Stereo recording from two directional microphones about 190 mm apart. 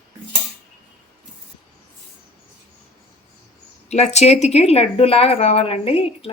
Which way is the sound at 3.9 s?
35° left (ahead or behind).